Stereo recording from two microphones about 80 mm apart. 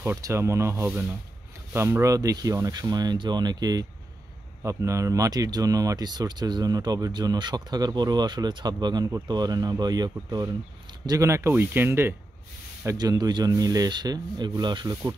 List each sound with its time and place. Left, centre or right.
0.2 s speech: right
4.6 s speech: right
11.1 s speech: right
11.5 s speech: right
13.2 s speech: right